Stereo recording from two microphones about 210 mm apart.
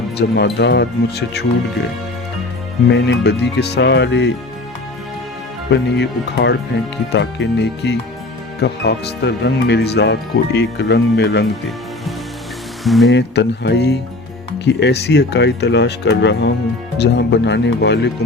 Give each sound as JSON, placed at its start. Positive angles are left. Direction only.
{"t": 0.2, "sound": "speech", "side_deg": 55}
{"t": 2.9, "sound": "speech", "side_deg": 55}
{"t": 5.7, "sound": "speech", "side_deg": 55}
{"t": 12.8, "sound": "speech", "side_deg": 0}
{"t": 13.1, "sound": "speech", "side_deg": 55}